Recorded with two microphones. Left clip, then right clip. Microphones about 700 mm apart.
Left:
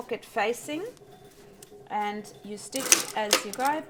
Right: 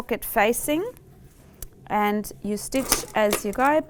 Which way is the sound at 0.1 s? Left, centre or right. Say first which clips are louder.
Right 7 dB; right.